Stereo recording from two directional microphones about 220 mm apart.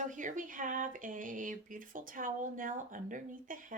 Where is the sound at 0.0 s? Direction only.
35° right (ahead or behind).